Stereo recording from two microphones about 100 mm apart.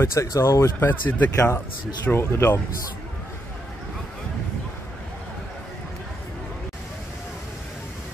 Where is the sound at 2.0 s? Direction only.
20° left (ahead or behind).